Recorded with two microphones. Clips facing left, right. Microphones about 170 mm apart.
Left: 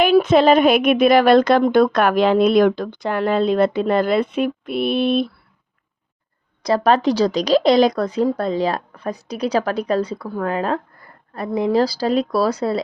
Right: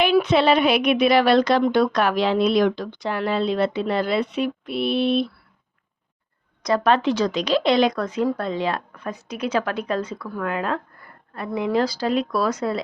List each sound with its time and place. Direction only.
0.0 s a woman's voice: 45° left (ahead or behind)
6.6 s a woman's voice: 35° left (ahead or behind)